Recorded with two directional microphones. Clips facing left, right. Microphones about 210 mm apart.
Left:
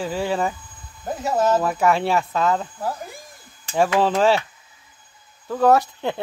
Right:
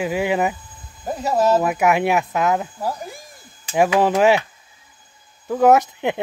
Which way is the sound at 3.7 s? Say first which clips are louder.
Right 2 dB; 15° right (ahead or behind).